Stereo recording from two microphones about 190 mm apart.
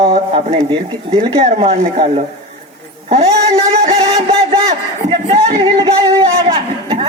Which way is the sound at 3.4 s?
35° right (ahead or behind).